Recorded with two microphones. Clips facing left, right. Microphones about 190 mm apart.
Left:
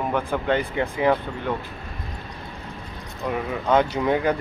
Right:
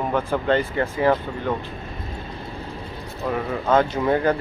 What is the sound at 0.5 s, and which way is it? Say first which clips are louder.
Speech: right 2 dB; 15° left (ahead or behind).